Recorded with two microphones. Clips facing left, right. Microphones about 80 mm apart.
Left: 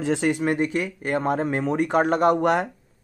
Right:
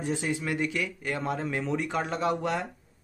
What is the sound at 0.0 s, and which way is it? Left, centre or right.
Speech, left.